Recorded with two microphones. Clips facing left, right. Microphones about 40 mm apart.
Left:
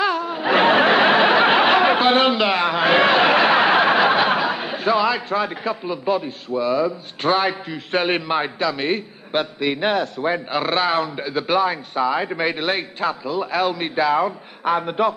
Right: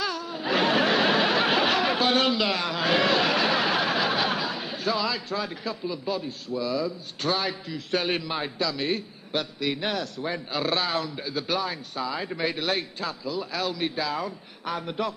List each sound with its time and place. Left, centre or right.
0.0 s snicker: left